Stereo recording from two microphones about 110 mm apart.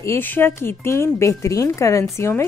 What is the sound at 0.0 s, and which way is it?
Speech, 20° left (ahead or behind).